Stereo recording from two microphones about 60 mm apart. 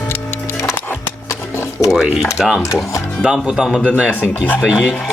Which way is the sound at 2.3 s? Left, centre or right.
Centre.